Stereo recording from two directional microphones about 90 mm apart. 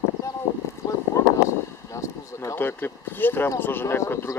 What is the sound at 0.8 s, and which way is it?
Speech, 40° left (ahead or behind).